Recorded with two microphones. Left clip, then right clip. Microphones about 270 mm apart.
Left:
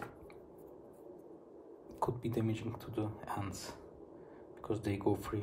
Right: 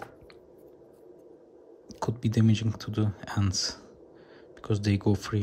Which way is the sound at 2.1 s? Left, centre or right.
Right.